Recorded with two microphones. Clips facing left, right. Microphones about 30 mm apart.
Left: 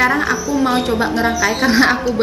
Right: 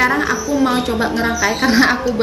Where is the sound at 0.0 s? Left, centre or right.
Centre.